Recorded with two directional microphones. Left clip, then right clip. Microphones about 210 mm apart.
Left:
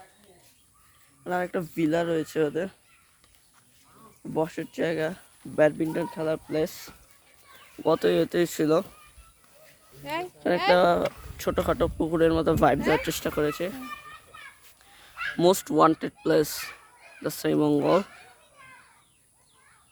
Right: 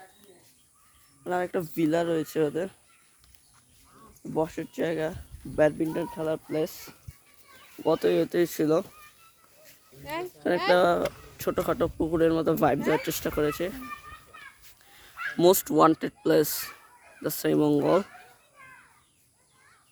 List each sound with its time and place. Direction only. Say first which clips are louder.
1.2 s speech: even; 10° right (ahead or behind)
4.2 s speech: left 1 dB; centre (ahead or behind)
10.0 s speech: left 3 dB; 60° left (ahead or behind)
10.7 s speech: left 2 dB; 5° left (ahead or behind)
14.8 s a sound: left 1 dB; centre (ahead or behind)
15.1 s fowl: left 2 dB; 15° left (ahead or behind)
15.4 s speech: even; 5° right (ahead or behind)
17.8 s speech: left 1 dB; 15° left (ahead or behind)